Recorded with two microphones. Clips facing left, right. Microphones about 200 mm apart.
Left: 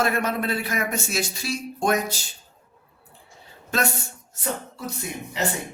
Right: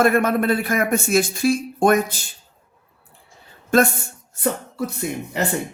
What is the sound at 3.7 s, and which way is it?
Speech, 50° right (ahead or behind).